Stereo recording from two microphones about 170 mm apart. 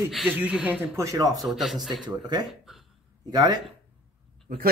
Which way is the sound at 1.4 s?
Centre (ahead or behind).